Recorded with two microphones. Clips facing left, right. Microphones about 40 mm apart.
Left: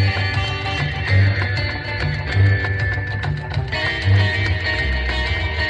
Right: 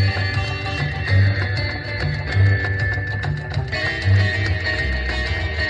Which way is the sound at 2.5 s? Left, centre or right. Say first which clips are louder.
Even; left.